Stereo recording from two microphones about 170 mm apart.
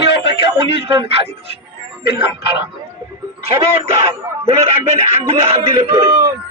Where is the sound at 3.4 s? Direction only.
35° right (ahead or behind).